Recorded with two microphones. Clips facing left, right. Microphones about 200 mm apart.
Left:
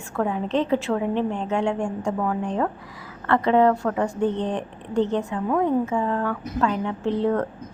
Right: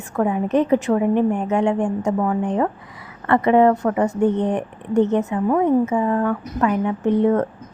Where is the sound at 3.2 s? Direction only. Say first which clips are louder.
Right 4 dB; 10° right (ahead or behind).